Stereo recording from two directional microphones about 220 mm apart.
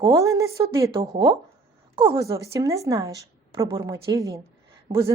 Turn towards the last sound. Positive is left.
turn(degrees=-15)  # may be behind; listen again after turning